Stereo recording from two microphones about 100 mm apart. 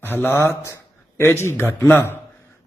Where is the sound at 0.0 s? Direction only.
20° left (ahead or behind).